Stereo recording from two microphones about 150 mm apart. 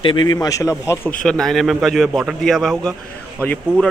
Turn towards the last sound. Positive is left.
turn(degrees=10)  # may be behind; listen again after turning